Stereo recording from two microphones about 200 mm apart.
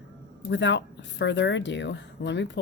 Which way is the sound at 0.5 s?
60° left (ahead or behind).